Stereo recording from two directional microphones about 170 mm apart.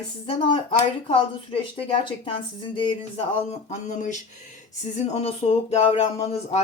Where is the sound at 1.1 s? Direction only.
30° left (ahead or behind).